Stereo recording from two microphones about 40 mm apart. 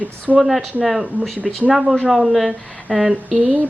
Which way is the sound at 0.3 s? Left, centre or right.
Centre.